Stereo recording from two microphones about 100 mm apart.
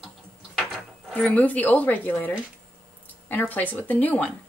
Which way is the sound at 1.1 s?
15° left (ahead or behind).